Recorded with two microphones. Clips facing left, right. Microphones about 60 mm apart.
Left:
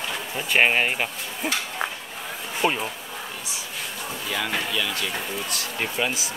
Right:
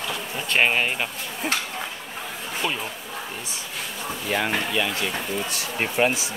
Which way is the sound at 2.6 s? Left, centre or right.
Left.